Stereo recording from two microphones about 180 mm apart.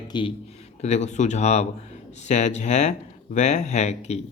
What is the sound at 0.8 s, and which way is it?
Speech, 40° left (ahead or behind).